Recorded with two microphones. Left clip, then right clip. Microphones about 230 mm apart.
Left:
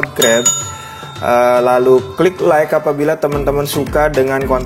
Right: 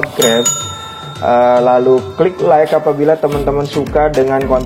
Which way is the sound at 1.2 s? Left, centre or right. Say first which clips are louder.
Right 1 dB; left.